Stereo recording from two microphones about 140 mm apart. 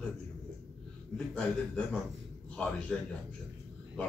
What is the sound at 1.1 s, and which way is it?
A man's voice, 5° left (ahead or behind).